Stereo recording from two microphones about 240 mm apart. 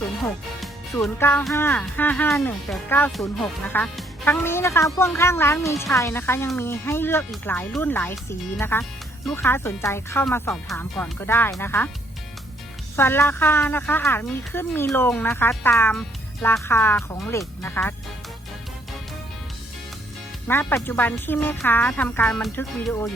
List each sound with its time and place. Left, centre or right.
1.0 s speech: centre
13.0 s speech: centre
20.5 s speech: centre